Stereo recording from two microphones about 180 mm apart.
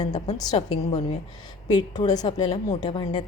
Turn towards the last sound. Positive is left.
turn(degrees=25)  # may be behind; listen again after turning